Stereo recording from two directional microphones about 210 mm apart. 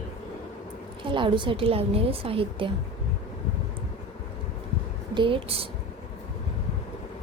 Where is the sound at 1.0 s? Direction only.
25° right (ahead or behind).